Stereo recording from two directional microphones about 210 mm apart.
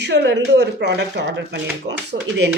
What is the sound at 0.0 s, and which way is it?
Speech, 55° right (ahead or behind).